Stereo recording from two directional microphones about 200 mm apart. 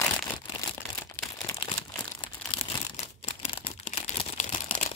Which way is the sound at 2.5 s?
30° left (ahead or behind).